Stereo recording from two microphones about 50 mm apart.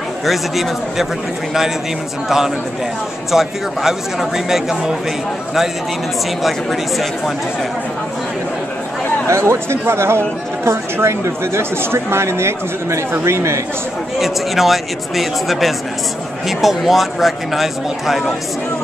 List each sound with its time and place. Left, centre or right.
0.2 s speech: centre
2.2 s speech: centre
6.4 s speech: centre
9.3 s speech: right
14.2 s speech: centre